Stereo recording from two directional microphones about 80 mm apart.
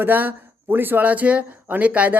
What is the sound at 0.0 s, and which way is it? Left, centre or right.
Speech, right.